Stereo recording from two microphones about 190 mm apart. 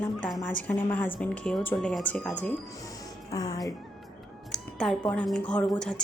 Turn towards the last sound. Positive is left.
turn(degrees=5)  # may be behind; listen again after turning